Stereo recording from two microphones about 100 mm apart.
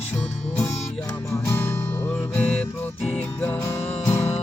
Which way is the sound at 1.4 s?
25° left (ahead or behind).